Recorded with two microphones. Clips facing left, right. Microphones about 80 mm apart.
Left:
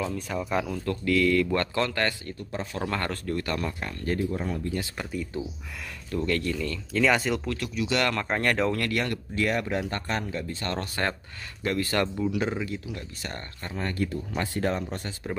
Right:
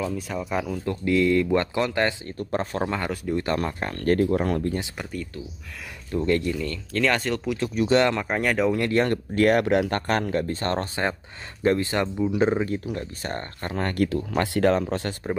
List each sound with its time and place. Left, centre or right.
0.3 s speech: centre
0.8 s speech: right
2.5 s speech: right
2.9 s speech: centre
3.5 s speech: right
3.9 s speech: right
4.9 s speech: centre
6.1 s speech: right
6.6 s speech: centre
7.7 s speech: right
8.2 s speech: centre
8.7 s speech: right
9.3 s speech: right
13.7 s speech: right